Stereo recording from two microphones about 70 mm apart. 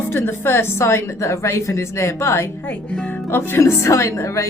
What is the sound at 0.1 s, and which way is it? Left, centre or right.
A woman's voice, left.